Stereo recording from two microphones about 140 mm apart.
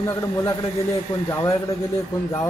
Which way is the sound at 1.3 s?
25° left (ahead or behind).